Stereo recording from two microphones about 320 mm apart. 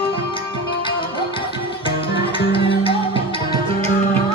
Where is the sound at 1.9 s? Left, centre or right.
Centre.